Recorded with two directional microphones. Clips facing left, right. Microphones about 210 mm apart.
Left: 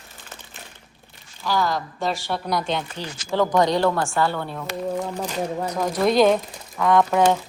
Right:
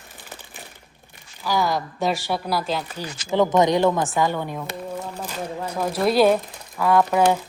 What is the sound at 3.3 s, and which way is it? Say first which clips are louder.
A woman's voice: right 2 dB; 20° right (ahead or behind).